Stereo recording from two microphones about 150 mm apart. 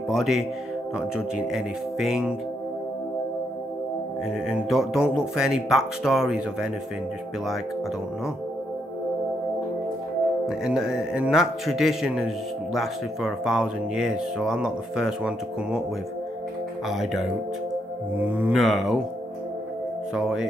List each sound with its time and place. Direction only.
0.1 s speech: centre (ahead or behind)
4.5 s speech: centre (ahead or behind)
10.4 s speech: 5° right (ahead or behind)
16.9 s speech: centre (ahead or behind)
20.2 s speech: 5° right (ahead or behind)